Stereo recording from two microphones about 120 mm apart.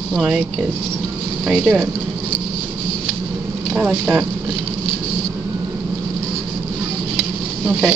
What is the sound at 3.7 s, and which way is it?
Speech, 15° right (ahead or behind).